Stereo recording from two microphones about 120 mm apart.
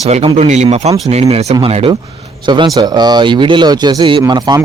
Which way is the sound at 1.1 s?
60° right (ahead or behind).